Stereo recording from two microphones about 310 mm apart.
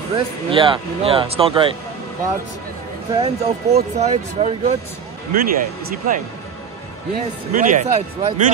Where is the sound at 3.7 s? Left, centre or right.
Right.